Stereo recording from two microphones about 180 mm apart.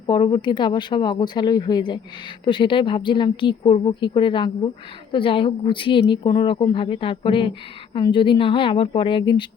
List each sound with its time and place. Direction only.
0.1 s speech: 25° left (ahead or behind)